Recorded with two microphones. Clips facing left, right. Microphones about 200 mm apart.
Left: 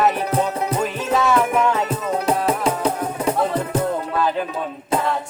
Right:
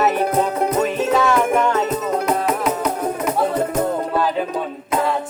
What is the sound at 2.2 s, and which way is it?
Music, 30° left (ahead or behind).